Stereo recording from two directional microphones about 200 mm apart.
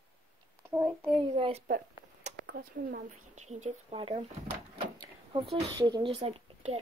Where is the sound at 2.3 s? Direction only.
35° right (ahead or behind).